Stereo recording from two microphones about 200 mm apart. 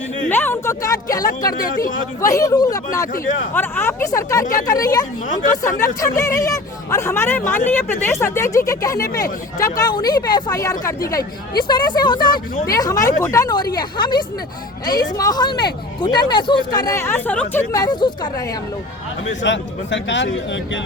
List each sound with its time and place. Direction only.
0.3 s speech: 10° left (ahead or behind)
1.6 s a man's voice: 45° left (ahead or behind)
2.2 s speech: 15° left (ahead or behind)
19.4 s a man's voice: 65° left (ahead or behind)